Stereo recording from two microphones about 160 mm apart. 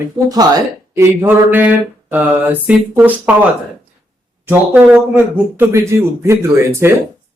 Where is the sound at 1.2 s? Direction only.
10° right (ahead or behind).